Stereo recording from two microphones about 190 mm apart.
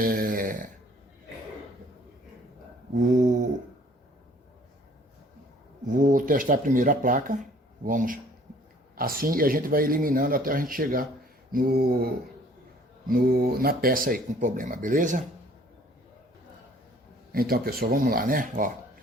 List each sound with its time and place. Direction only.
0.0 s snoring: 50° right (ahead or behind)
2.9 s a sound: 40° right (ahead or behind)
5.9 s speech: 45° right (ahead or behind)
17.3 s speech: 55° right (ahead or behind)